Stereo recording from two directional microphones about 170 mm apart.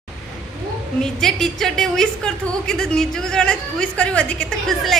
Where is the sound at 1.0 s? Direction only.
5° left (ahead or behind).